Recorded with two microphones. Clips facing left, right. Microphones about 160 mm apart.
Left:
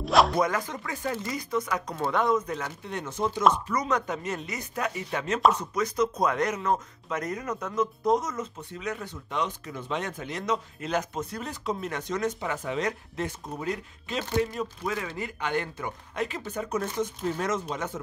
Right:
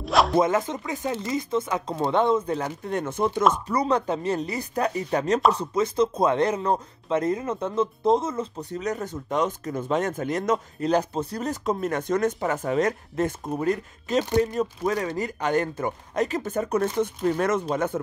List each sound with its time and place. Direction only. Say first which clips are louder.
0.0 s music: right 1 dB; centre (ahead or behind)
0.4 s speech: right 5 dB; 25° right (ahead or behind)
2.8 s speech: right 3 dB; 50° right (ahead or behind)
3.6 s speech: right 5 dB; 30° right (ahead or behind); by 10.9 s 45° right (ahead or behind)
10.9 s speech: right 6 dB; 35° right (ahead or behind); by 18.0 s 55° right (ahead or behind)